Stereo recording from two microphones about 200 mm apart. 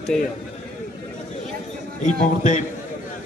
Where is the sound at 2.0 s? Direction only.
40° left (ahead or behind).